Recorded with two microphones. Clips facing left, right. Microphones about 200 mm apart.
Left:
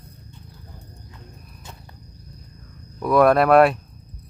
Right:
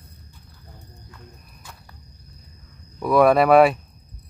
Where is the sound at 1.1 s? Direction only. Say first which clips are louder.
Left 2 dB; 25° left (ahead or behind).